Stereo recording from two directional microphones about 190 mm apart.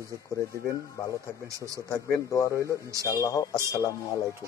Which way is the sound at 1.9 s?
15° left (ahead or behind).